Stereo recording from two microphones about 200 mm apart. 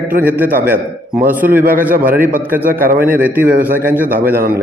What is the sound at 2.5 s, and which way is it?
A man's voice, 10° right (ahead or behind).